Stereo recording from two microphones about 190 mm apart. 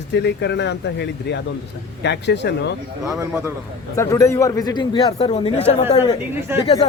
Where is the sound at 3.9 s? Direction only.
15° left (ahead or behind).